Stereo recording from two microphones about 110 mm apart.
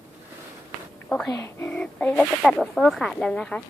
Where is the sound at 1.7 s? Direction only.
10° left (ahead or behind).